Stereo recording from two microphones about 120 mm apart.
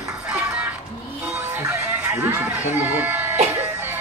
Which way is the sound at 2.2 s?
20° right (ahead or behind).